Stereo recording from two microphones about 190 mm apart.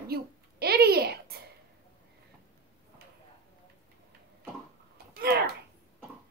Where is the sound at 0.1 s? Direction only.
55° right (ahead or behind).